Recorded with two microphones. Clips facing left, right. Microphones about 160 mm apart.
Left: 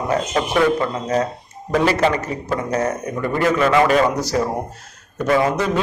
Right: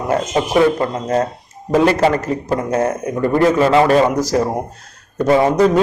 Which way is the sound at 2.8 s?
35° right (ahead or behind).